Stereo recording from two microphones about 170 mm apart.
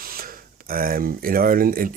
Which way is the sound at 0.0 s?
60° right (ahead or behind).